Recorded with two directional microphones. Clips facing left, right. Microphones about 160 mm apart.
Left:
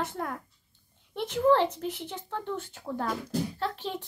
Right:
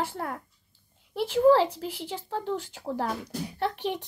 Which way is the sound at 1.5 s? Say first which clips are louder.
Right 2 dB; 10° right (ahead or behind).